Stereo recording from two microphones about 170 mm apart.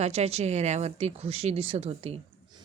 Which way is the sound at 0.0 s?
40° right (ahead or behind).